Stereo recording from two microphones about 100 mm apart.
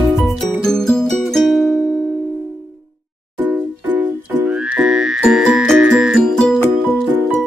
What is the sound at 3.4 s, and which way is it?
Music, 20° right (ahead or behind).